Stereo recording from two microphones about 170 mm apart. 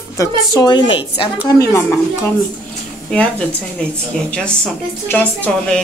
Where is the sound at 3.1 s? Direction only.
5° left (ahead or behind).